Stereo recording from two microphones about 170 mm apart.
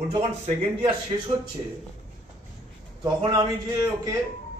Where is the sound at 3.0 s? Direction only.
25° right (ahead or behind).